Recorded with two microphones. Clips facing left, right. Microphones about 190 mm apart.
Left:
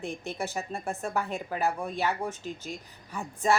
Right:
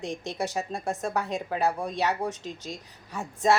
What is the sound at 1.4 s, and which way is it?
Speech, 30° right (ahead or behind).